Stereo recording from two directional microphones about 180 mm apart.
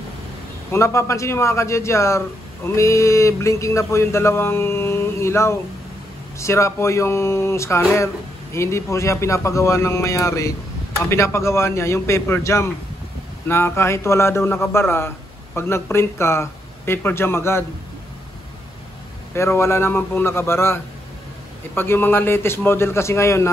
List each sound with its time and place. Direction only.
0.7 s a man's voice: 15° left (ahead or behind)
19.3 s a man's voice: 15° left (ahead or behind)